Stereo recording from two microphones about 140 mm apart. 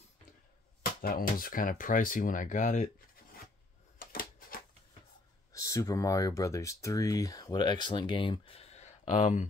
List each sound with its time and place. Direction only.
1.0 s speech: 90° left; by 2.9 s 65° left (ahead or behind)
4.0 s typewriter: 90° left
5.5 s speech: 20° left (ahead or behind); by 9.5 s 65° left (ahead or behind)